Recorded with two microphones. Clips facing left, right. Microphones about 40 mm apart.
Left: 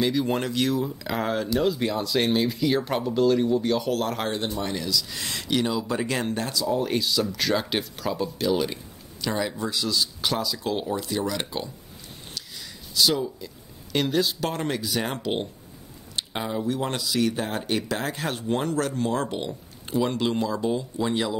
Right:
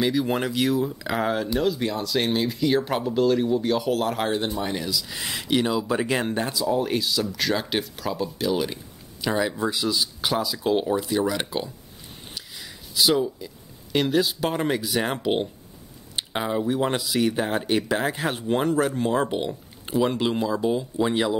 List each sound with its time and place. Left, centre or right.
0.0 s speech: centre
12.4 s a sound: centre
13.9 s speech: centre